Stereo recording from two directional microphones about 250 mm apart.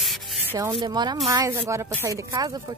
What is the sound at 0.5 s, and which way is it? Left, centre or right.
Speech, centre.